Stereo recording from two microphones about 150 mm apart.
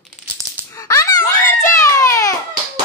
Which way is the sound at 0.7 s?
20° left (ahead or behind).